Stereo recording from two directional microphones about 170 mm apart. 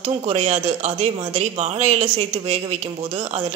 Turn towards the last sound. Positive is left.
turn(degrees=-40)  # may be behind; listen again after turning